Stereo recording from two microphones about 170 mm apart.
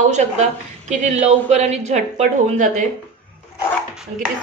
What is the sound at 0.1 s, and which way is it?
A woman's voice, 45° right (ahead or behind).